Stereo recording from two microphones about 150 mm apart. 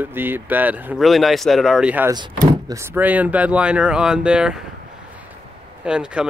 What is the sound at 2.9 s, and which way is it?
Speech, 10° right (ahead or behind).